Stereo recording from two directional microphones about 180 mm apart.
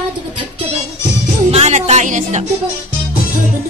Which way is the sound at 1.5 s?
35° right (ahead or behind).